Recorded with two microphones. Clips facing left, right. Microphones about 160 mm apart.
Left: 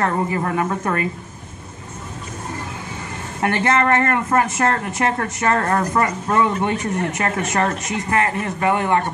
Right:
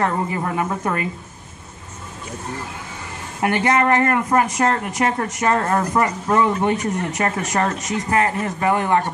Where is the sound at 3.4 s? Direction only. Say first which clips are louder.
Even; 15° right (ahead or behind).